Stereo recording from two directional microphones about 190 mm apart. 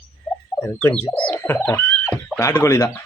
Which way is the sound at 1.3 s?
10° left (ahead or behind).